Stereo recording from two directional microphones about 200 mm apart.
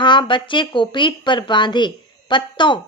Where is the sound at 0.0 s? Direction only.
25° left (ahead or behind).